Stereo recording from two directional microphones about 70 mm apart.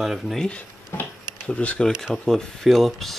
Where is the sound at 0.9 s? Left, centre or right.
Left.